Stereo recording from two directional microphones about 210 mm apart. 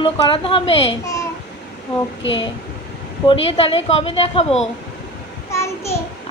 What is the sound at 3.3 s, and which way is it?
A woman's voice, 25° left (ahead or behind).